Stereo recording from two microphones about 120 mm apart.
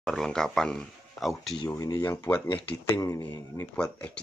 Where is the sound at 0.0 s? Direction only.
5° left (ahead or behind).